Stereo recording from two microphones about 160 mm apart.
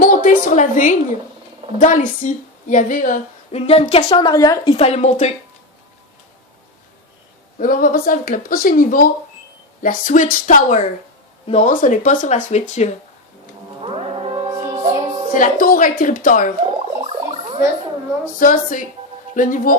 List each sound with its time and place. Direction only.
0.0 s a woman's voice: 55° left (ahead or behind)
3.5 s a woman's voice: 40° left (ahead or behind)
7.6 s a woman's voice: 60° left (ahead or behind); by 11.7 s 40° left (ahead or behind)
11.7 s a woman's voice: 55° left (ahead or behind)
13.8 s music: 35° right (ahead or behind)
14.5 s music: 20° right (ahead or behind)
15.3 s speech: 60° left (ahead or behind)
16.8 s gargling: 40° right (ahead or behind)
18.3 s speech: 55° left (ahead or behind)